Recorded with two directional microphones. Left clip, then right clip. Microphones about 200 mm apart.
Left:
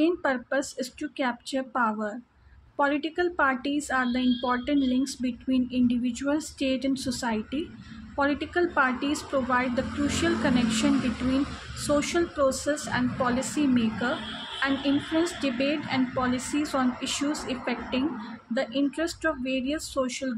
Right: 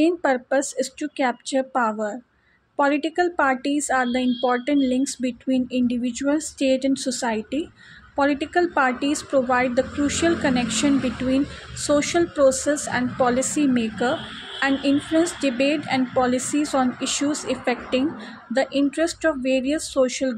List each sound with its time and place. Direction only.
0.0 s a woman's voice: 25° right (ahead or behind)